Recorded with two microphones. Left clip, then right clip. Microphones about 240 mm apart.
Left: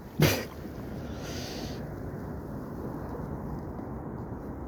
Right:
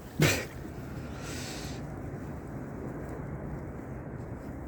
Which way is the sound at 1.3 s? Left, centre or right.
Centre.